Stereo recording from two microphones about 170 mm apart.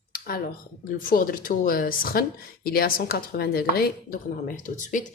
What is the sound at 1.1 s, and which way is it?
A woman's voice, 55° left (ahead or behind).